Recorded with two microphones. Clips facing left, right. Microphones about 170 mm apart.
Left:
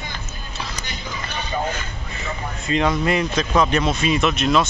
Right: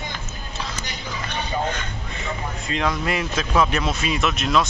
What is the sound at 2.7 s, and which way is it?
Speech, centre (ahead or behind).